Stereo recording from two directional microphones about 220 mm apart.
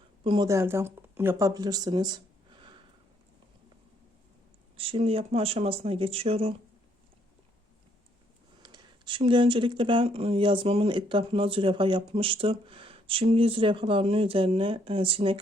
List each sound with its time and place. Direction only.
0.3 s speech: 15° right (ahead or behind)
4.8 s speech: 25° right (ahead or behind)
8.6 s speech: 20° right (ahead or behind)